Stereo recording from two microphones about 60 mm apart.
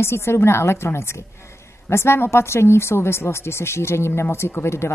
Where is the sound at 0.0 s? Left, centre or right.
Left.